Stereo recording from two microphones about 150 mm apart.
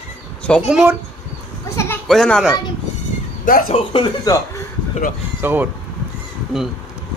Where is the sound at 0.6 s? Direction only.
5° right (ahead or behind).